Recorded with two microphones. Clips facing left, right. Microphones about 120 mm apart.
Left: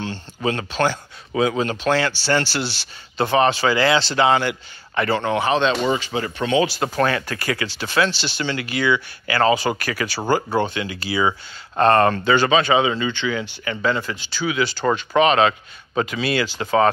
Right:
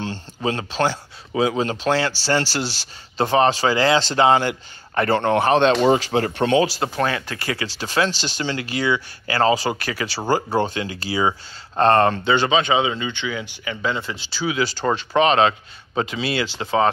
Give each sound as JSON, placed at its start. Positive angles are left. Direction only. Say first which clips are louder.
{"t": 0.4, "sound": "speech", "louder": "left 1 dB", "side_deg": -30}
{"t": 5.9, "sound": "speech", "louder": "right 4 dB", "side_deg": -75}
{"t": 6.8, "sound": "speech", "louder": "left 2 dB", "side_deg": -20}
{"t": 14.0, "sound": "speech", "louder": "even", "side_deg": -30}